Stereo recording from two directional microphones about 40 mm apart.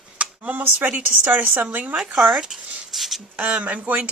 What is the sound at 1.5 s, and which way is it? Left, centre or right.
Speech, right.